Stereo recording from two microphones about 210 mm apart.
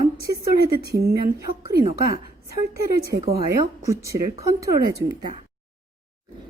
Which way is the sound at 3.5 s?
15° right (ahead or behind).